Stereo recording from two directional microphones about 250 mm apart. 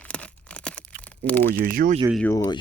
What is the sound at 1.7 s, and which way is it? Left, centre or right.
Speech, right.